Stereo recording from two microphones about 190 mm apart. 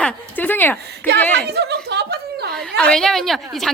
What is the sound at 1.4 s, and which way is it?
Chuckle, 60° right (ahead or behind).